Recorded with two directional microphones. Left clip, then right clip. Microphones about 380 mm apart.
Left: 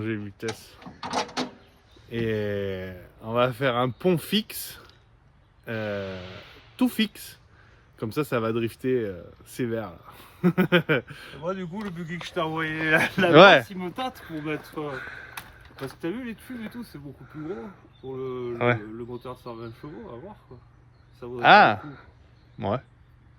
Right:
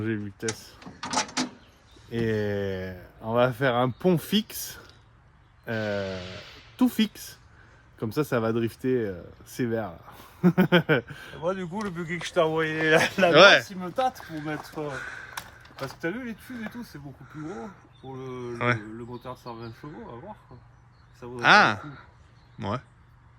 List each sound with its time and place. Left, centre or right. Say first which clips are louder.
0.0 s speech: even; centre
1.0 s drawer open or close: even; centre
2.0 s speech: even; centre
13.1 s speech: left 3 dB; centre
16.5 s speech: even; centre
21.5 s speech: left 3 dB; centre